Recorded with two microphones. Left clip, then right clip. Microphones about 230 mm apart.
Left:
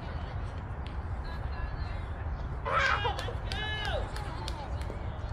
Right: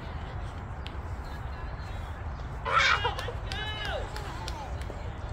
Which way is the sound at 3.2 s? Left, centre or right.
Centre.